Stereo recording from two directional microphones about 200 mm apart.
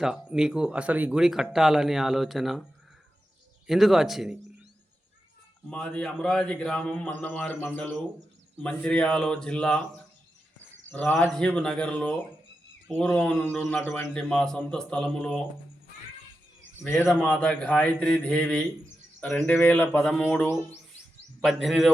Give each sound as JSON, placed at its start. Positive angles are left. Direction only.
{"t": 0.0, "sound": "speech", "side_deg": -5}
{"t": 3.7, "sound": "speech", "side_deg": 0}
{"t": 5.7, "sound": "speech", "side_deg": 5}
{"t": 10.9, "sound": "speech", "side_deg": 5}
{"t": 16.8, "sound": "speech", "side_deg": 10}
{"t": 20.0, "sound": "speech", "side_deg": 0}